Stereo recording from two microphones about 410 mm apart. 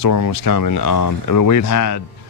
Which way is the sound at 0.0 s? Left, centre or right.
Left.